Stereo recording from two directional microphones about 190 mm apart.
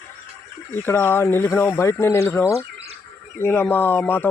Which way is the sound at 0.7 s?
10° left (ahead or behind).